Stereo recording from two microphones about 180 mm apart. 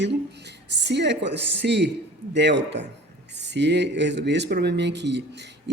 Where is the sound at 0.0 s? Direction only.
70° right (ahead or behind).